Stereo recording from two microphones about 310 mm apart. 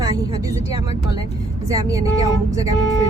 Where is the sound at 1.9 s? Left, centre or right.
Centre.